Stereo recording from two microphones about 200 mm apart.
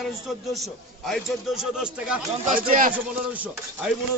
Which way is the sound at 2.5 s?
45° right (ahead or behind).